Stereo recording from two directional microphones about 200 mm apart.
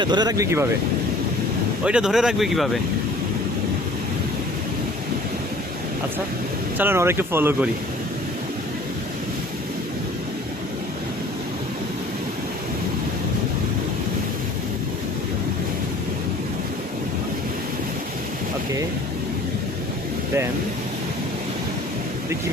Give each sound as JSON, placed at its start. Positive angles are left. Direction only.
{"t": 0.0, "sound": "speech", "side_deg": -20}
{"t": 1.8, "sound": "speech", "side_deg": -5}
{"t": 6.7, "sound": "speech", "side_deg": -10}